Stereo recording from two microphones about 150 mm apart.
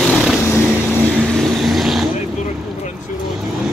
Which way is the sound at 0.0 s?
Centre (ahead or behind).